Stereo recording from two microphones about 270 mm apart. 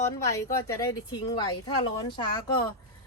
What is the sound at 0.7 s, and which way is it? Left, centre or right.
Speech, centre.